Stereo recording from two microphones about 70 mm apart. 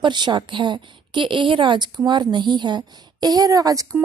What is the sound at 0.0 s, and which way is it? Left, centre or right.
A woman's voice, right.